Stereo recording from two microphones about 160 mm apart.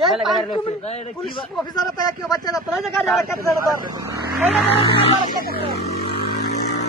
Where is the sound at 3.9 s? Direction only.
20° right (ahead or behind).